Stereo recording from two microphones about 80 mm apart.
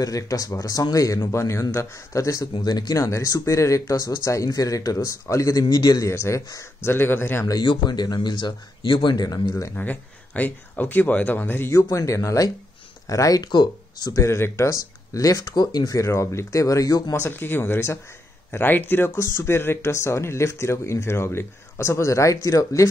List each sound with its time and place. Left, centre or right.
0.0 s speech: left
2.6 s speech: left
3.0 s speech: left
6.0 s speech: left
7.6 s speech: left
9.8 s speech: left
11.7 s speech: left
13.5 s speech: left
14.2 s speech: left
15.5 s speech: left
16.1 s speech: left
17.1 s speech: left